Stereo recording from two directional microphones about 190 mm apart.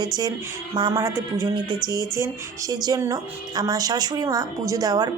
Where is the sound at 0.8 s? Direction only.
20° right (ahead or behind).